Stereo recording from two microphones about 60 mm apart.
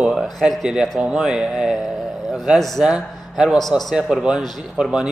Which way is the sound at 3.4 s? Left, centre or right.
Centre.